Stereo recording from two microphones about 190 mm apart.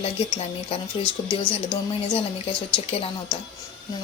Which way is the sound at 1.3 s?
25° left (ahead or behind).